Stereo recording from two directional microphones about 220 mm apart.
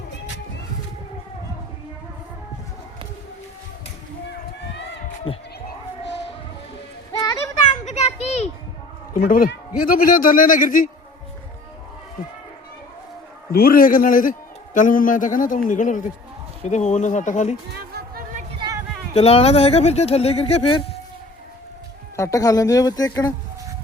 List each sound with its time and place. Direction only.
5.3 s speech: 25° left (ahead or behind)
7.1 s children playing: 15° left (ahead or behind)
7.9 s children playing: 30° left (ahead or behind)
9.1 s a man's voice: 40° left (ahead or behind)
13.5 s a man's voice: 45° left (ahead or behind)
17.9 s a sound: 40° right (ahead or behind)
19.1 s speech: 25° left (ahead or behind)
22.1 s speech: 15° left (ahead or behind)